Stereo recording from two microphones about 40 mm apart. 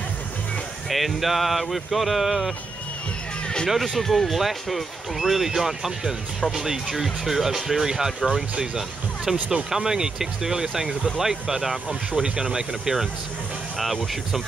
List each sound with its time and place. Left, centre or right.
0.8 s speech: centre
3.6 s speech: centre
4.0 s speech: centre
4.3 s speech: centre